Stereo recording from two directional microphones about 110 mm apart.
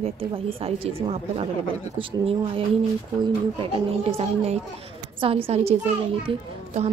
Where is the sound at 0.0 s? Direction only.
60° right (ahead or behind).